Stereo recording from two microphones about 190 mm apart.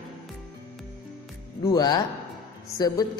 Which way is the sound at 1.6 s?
20° left (ahead or behind).